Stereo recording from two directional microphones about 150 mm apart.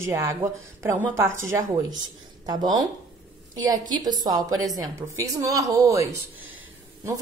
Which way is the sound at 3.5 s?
25° right (ahead or behind).